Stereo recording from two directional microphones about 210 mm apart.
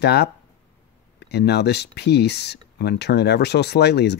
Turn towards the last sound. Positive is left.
turn(degrees=50)  # may be behind; listen again after turning